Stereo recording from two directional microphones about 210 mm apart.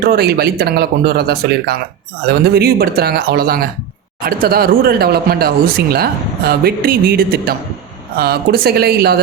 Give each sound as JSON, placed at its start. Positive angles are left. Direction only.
{"t": 0.0, "sound": "speech", "side_deg": -45}